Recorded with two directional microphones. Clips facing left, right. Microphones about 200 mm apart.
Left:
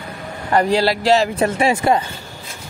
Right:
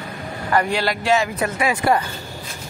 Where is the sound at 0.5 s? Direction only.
35° left (ahead or behind).